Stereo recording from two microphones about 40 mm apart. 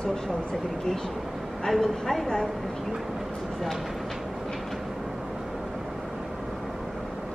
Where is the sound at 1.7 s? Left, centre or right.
Centre.